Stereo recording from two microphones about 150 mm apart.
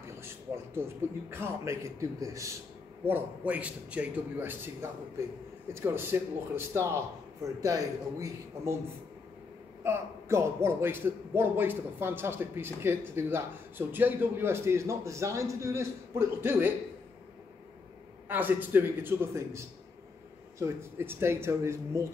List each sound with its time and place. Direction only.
0.0 s a sound: 15° right (ahead or behind)
0.8 s a man's voice: 15° right (ahead or behind)
5.7 s a man's voice: 15° right (ahead or behind)
9.8 s a man's voice: 15° right (ahead or behind)
18.3 s a man's voice: 15° right (ahead or behind)